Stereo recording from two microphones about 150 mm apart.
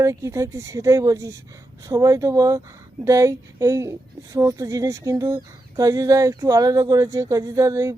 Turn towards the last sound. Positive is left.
turn(degrees=-20)  # may be behind; listen again after turning